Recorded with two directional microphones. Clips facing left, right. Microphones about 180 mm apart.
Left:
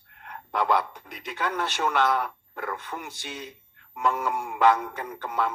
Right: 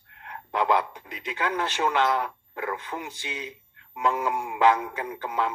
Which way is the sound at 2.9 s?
10° right (ahead or behind).